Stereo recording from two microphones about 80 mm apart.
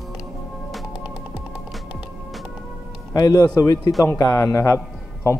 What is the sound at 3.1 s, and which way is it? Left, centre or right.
A man's voice, left.